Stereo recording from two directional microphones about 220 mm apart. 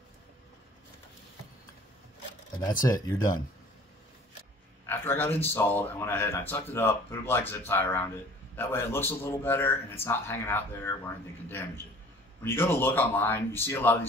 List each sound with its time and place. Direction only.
2.8 s speech: 15° left (ahead or behind)
4.8 s speech: 10° left (ahead or behind)